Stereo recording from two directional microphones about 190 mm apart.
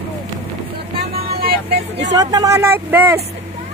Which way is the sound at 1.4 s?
60° right (ahead or behind).